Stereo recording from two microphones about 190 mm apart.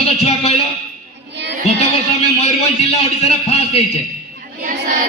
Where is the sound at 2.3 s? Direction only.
35° left (ahead or behind).